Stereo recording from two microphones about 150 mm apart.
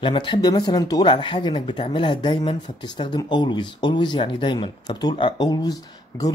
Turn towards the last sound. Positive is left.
turn(degrees=25)  # may be behind; listen again after turning